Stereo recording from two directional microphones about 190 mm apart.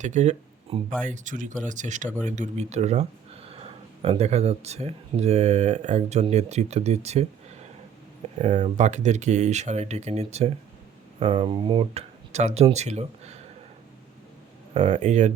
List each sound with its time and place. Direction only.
0.0 s speech: 35° right (ahead or behind)
14.7 s speech: 35° right (ahead or behind)